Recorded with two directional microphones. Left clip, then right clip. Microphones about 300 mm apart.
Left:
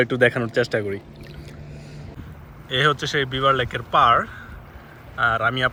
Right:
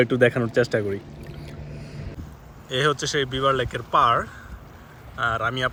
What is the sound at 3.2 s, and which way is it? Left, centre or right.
Speech, centre.